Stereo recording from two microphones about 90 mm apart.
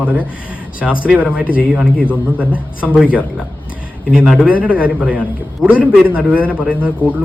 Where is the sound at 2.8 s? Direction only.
15° right (ahead or behind).